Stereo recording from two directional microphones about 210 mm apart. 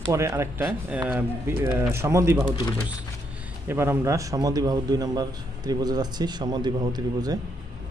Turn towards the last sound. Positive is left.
turn(degrees=-20)  # may be behind; listen again after turning